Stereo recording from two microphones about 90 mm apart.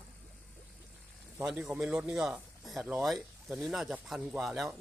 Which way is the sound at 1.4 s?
5° right (ahead or behind).